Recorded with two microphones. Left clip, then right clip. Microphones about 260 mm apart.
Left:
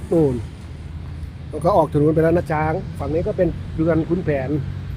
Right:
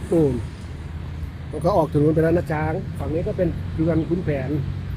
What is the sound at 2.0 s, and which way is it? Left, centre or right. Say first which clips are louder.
Speech: left 2 dB; centre.